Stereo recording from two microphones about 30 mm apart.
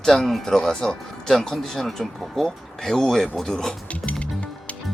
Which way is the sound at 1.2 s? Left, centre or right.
Centre.